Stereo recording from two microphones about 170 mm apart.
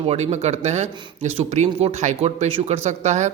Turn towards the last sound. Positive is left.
turn(degrees=-45)  # may be behind; listen again after turning